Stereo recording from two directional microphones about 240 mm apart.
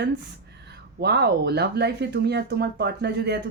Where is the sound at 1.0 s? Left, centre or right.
Right.